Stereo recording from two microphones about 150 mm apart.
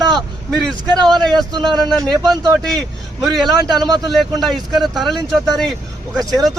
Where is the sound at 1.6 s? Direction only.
Centre (ahead or behind).